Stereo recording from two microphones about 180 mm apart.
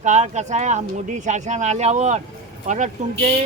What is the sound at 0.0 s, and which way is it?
Speech, 40° right (ahead or behind).